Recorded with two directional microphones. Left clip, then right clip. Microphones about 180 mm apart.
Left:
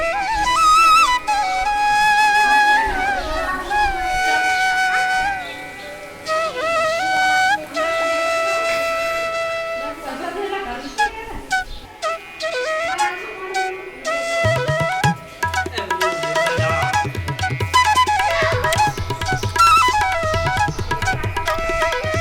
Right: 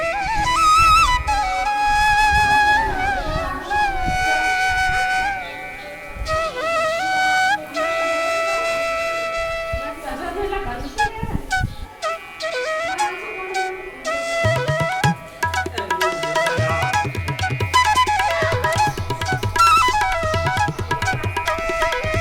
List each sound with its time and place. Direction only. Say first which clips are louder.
0.0 s flute: left 1 dB; centre (ahead or behind)
6.2 s music: left 1 dB; centre (ahead or behind)
11.0 s music: left 1 dB; centre (ahead or behind)
12.0 s flute: left 1 dB; centre (ahead or behind)